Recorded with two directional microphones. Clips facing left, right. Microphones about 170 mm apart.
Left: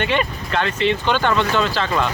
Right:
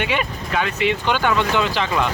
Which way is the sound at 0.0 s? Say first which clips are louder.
Left 2 dB; 10° right (ahead or behind).